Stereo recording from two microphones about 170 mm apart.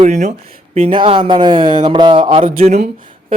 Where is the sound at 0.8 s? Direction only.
30° right (ahead or behind).